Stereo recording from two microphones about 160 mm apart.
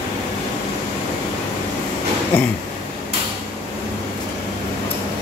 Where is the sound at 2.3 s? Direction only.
10° left (ahead or behind).